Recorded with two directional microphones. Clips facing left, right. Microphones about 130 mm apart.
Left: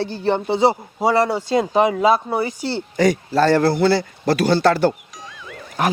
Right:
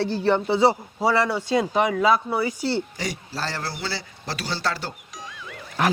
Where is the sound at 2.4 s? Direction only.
40° left (ahead or behind).